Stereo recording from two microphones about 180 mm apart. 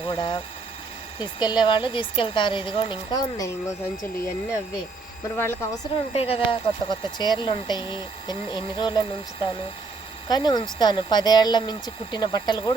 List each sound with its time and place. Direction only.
0.1 s speech: 25° left (ahead or behind)
5.4 s a woman's voice: 10° left (ahead or behind)
6.1 s speech: 35° left (ahead or behind)